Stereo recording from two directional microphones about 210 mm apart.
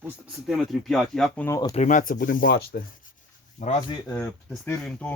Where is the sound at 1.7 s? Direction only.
35° left (ahead or behind).